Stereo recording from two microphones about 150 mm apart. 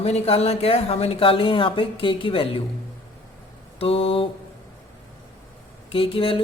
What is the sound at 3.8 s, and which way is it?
Speech, 40° left (ahead or behind).